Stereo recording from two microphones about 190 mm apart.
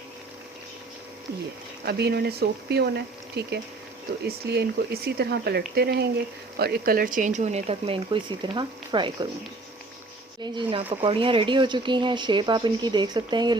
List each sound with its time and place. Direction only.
1.8 s speech: 55° right (ahead or behind); by 9.3 s 25° right (ahead or behind)
10.4 s speech: 25° right (ahead or behind)